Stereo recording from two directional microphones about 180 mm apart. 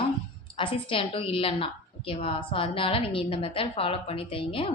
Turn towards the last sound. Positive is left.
turn(degrees=30)  # may be behind; listen again after turning